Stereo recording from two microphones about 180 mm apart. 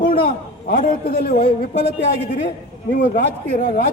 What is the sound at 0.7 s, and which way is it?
A man's voice, 55° left (ahead or behind).